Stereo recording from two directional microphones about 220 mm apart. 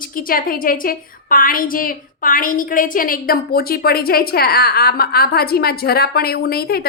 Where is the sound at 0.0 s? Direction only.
40° left (ahead or behind).